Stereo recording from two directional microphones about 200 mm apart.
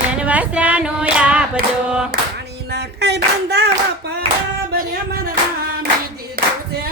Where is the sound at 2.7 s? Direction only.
60° right (ahead or behind).